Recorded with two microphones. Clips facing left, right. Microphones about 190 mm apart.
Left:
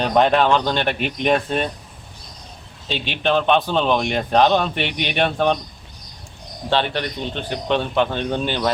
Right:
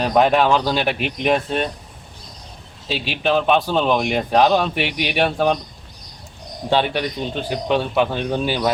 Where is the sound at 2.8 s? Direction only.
5° right (ahead or behind).